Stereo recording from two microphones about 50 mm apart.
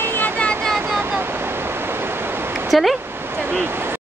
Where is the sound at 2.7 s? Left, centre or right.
Centre.